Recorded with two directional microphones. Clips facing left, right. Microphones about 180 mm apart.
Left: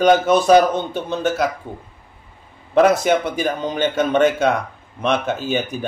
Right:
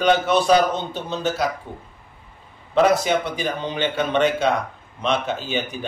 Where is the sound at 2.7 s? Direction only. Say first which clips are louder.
Left 3 dB; 50° left (ahead or behind).